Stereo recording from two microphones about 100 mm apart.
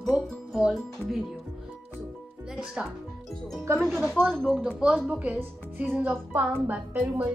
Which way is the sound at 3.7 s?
25° right (ahead or behind).